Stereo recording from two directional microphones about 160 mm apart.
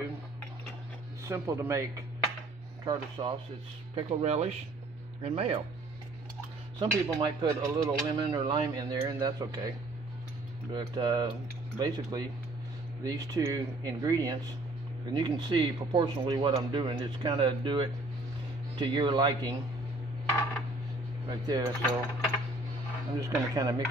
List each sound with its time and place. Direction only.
1.2 s speech: 20° right (ahead or behind)
3.9 s speech: 40° right (ahead or behind)
6.8 s speech: 25° right (ahead or behind)
10.7 s speech: 25° right (ahead or behind)
21.3 s speech: 25° right (ahead or behind)
23.1 s speech: 20° right (ahead or behind)